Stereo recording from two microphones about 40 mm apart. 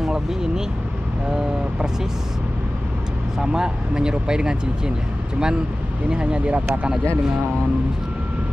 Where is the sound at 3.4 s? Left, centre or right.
Centre.